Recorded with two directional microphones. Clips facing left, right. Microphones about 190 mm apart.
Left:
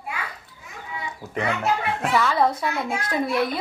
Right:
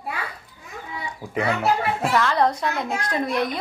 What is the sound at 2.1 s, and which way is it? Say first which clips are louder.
A woman's voice: left 1 dB; 5° left (ahead or behind).